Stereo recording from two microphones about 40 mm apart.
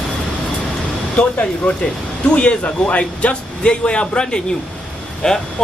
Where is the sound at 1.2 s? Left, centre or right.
Left.